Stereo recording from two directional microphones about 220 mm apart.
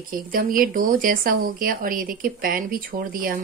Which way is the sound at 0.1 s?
40° right (ahead or behind).